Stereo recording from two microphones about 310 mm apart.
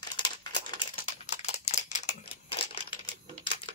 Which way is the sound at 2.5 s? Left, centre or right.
Centre.